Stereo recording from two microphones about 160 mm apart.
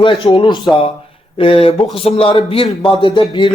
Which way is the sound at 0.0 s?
30° left (ahead or behind).